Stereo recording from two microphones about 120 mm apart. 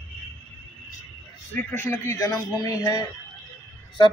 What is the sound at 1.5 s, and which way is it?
A man's voice, 15° left (ahead or behind).